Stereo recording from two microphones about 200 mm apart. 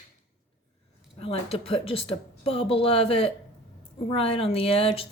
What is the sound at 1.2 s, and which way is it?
Speech, 30° left (ahead or behind).